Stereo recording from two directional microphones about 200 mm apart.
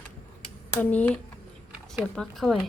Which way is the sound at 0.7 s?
10° left (ahead or behind).